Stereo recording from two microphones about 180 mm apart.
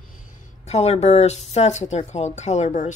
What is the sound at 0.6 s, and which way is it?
A woman's voice, 35° left (ahead or behind).